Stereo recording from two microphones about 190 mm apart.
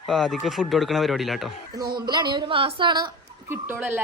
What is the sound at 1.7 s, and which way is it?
Speech, 20° right (ahead or behind).